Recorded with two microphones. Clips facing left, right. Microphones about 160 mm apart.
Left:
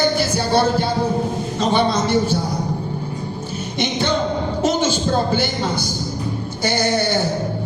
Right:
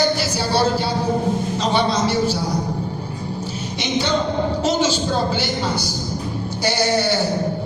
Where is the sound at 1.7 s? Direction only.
50° left (ahead or behind).